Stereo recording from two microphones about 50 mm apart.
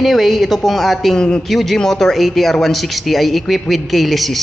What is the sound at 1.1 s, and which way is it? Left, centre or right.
Speech, centre.